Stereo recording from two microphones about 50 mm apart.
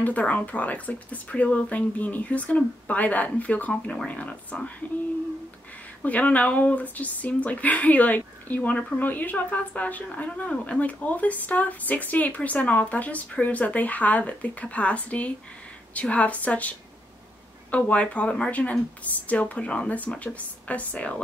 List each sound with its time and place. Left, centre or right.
0.0 s speech: left
6.0 s speech: left
18.5 s speech: left